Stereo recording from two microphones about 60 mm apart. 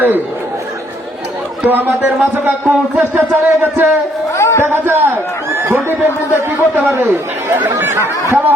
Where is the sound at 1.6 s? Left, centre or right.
Right.